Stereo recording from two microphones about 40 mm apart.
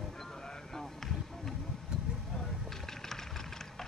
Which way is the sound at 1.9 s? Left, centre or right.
Right.